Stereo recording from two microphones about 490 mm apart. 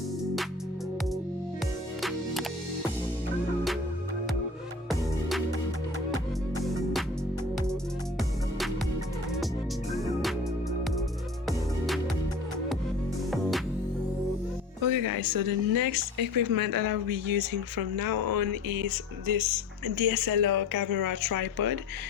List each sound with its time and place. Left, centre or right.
2.0 s music: centre
6.7 s music: centre
9.9 s music: centre
14.8 s speech: right